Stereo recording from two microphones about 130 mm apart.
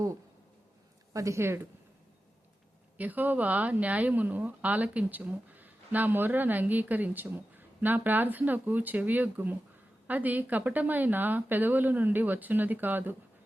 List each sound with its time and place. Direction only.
1.1 s speech: 25° right (ahead or behind)
3.0 s speech: 15° right (ahead or behind)